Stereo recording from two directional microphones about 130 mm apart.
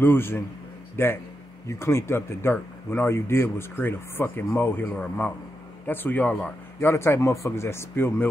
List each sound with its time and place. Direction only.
0.0 s speech: 15° left (ahead or behind)